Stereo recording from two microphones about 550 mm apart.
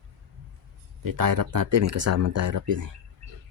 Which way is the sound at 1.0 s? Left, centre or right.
Right.